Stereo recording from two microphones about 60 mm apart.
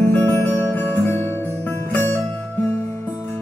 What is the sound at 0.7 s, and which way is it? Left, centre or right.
Music, left.